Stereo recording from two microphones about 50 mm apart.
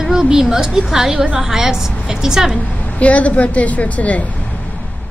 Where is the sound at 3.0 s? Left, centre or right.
Left.